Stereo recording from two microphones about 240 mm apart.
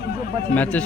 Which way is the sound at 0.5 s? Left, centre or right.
Centre.